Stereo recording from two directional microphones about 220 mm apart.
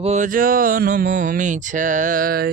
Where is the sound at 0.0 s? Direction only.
30° right (ahead or behind).